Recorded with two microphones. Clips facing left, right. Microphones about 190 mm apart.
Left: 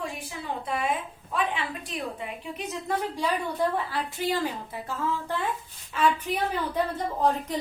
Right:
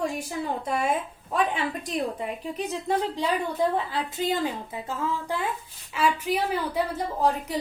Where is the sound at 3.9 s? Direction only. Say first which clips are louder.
Right 1 dB; 20° right (ahead or behind).